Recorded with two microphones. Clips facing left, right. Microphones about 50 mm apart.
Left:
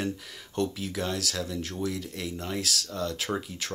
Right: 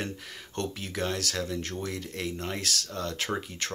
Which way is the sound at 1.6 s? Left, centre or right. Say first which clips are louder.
Left 2 dB; centre.